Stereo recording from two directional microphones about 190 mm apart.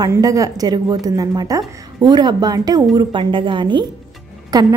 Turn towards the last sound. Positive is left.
turn(degrees=-20)  # may be behind; listen again after turning